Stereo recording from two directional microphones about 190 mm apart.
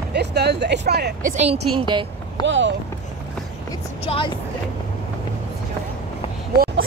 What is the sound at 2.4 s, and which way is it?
Speech, 75° right (ahead or behind).